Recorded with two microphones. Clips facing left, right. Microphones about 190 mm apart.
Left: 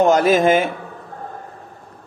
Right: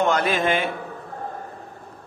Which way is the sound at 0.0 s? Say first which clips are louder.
Left 7 dB; 40° left (ahead or behind).